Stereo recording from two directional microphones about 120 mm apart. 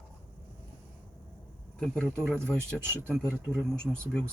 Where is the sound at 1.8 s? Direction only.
5° left (ahead or behind).